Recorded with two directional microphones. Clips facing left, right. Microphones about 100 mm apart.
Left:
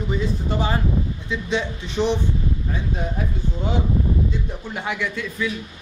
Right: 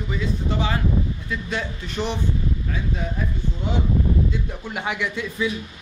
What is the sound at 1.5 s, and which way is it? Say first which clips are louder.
Speech: left 6 dB; 20° left (ahead or behind).